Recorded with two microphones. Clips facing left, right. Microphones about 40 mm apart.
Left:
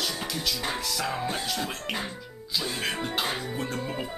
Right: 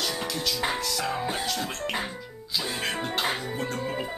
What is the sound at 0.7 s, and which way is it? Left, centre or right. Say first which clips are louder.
Speech: right 1 dB; centre.